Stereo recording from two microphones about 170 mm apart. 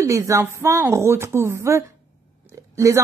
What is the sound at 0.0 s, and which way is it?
A woman's voice, 15° right (ahead or behind).